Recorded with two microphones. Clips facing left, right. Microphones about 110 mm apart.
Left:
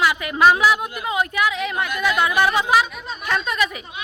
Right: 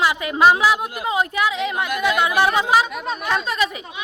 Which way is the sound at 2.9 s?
90° right.